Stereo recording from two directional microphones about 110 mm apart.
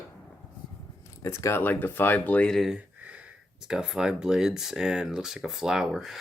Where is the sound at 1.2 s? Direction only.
25° left (ahead or behind).